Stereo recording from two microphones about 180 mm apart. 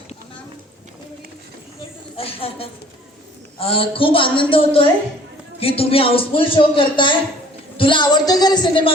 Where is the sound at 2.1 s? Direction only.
30° left (ahead or behind).